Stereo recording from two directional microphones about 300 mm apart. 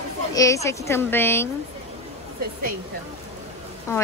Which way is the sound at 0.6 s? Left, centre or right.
Centre.